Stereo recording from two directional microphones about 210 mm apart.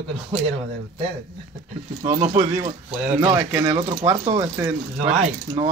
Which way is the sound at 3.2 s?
10° right (ahead or behind).